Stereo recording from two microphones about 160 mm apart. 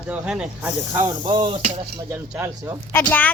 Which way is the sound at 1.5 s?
45° right (ahead or behind).